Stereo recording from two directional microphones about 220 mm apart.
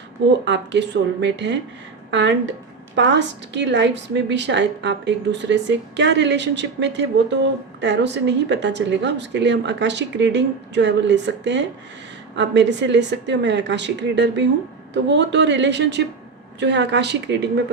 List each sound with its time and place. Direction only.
0.4 s a woman's voice: 55° right (ahead or behind)